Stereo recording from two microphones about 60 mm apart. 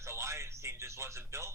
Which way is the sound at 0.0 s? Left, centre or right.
Right.